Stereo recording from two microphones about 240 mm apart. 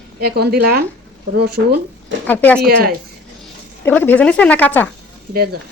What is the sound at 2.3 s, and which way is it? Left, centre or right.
Speech, centre.